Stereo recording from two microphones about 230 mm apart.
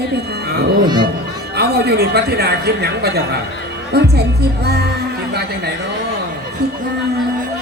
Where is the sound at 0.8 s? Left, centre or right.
Centre.